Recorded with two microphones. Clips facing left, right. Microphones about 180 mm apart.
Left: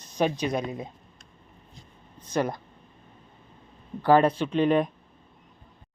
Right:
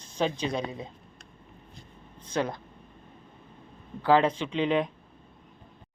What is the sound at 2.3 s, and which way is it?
Speech, 10° left (ahead or behind).